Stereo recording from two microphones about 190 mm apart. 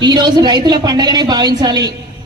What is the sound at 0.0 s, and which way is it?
A man's voice, 25° right (ahead or behind).